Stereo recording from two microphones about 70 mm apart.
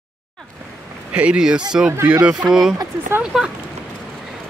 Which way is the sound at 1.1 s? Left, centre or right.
Centre.